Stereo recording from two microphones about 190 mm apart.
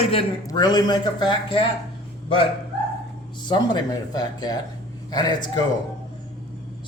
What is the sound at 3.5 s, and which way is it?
Speech, 20° left (ahead or behind).